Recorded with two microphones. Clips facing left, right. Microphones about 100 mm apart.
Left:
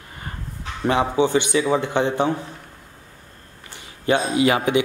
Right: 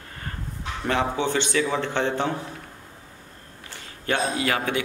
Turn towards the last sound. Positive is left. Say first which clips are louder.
# left 7 dB
turn(degrees=15)  # may be behind; listen again after turning